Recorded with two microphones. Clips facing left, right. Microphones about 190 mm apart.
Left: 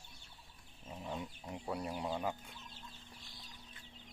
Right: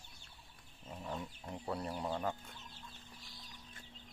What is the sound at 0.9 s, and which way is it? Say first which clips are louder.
Speech: even; 10° left (ahead or behind).